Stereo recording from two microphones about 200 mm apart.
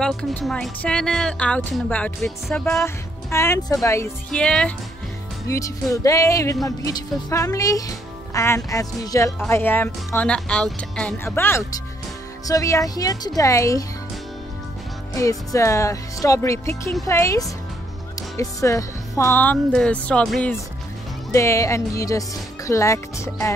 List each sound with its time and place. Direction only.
0.0 s a woman's voice: 5° left (ahead or behind)
5.5 s speech: 15° left (ahead or behind)
15.1 s speech: 15° left (ahead or behind)